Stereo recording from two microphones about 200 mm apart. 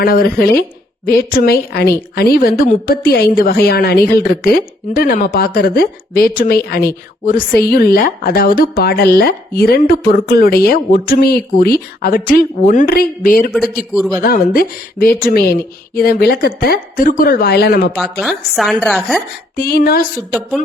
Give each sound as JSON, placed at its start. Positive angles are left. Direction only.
{"t": 0.0, "sound": "a woman's voice", "side_deg": 50}
{"t": 13.5, "sound": "speech", "side_deg": 0}
{"t": 14.2, "sound": "a woman's voice", "side_deg": 45}
{"t": 18.2, "sound": "speech", "side_deg": 0}
{"t": 19.5, "sound": "a woman's voice", "side_deg": 50}